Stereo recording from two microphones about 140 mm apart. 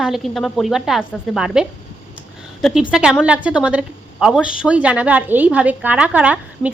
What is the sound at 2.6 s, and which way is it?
A woman's voice, 5° right (ahead or behind).